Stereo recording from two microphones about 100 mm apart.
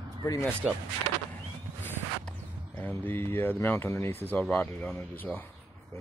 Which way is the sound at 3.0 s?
20° left (ahead or behind).